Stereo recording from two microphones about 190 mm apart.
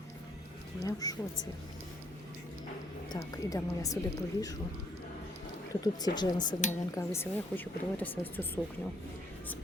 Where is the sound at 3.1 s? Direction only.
20° left (ahead or behind).